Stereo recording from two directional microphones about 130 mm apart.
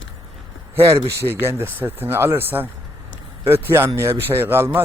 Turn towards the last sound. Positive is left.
turn(degrees=-15)  # may be behind; listen again after turning